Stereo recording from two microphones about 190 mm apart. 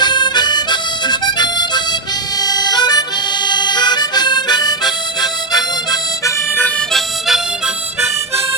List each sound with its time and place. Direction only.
0.0 s harmonica: 20° left (ahead or behind)
6.6 s harmonica: 5° left (ahead or behind)